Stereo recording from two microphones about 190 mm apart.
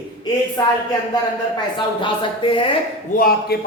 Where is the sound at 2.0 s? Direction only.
25° left (ahead or behind).